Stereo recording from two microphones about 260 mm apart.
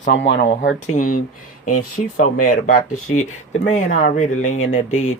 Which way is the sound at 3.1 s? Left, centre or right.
Left.